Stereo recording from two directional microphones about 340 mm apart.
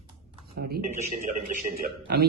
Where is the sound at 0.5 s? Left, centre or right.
Right.